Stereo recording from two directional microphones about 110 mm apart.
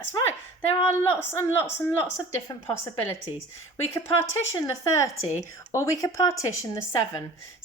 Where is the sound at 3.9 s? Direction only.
25° left (ahead or behind).